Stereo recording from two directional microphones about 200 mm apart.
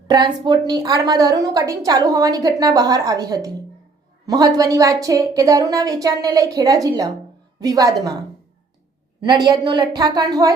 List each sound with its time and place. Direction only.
0.1 s a woman's voice: 20° right (ahead or behind)
9.2 s a woman's voice: 20° right (ahead or behind)